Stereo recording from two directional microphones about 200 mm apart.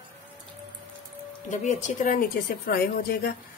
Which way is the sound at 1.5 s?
35° left (ahead or behind).